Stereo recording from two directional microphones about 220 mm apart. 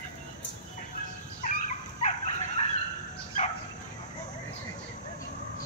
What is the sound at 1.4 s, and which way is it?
Dog, 35° left (ahead or behind).